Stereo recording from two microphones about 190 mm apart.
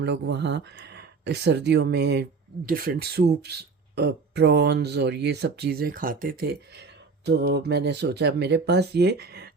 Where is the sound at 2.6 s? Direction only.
50° right (ahead or behind).